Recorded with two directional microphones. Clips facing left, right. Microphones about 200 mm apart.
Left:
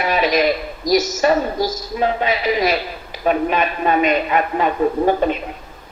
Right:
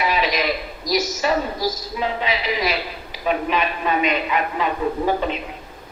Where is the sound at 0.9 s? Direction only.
50° left (ahead or behind).